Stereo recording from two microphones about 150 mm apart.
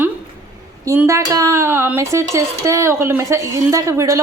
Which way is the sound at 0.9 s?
20° right (ahead or behind).